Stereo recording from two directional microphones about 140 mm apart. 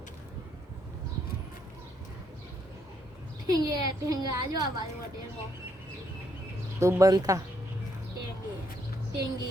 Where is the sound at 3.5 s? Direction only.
25° right (ahead or behind).